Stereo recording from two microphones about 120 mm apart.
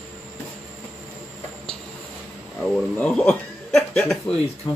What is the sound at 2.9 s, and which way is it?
Speech, 10° left (ahead or behind).